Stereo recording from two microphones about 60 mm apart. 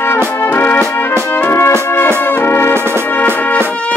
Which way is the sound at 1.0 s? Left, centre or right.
Left.